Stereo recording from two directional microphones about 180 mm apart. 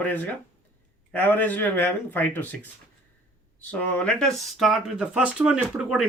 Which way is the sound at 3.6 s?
10° left (ahead or behind).